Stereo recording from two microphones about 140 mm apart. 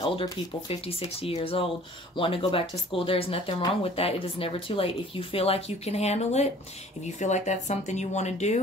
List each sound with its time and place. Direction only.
0.1 s speech: 40° left (ahead or behind)